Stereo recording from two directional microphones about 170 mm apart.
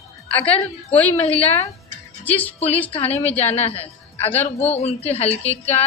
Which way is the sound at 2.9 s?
35° left (ahead or behind).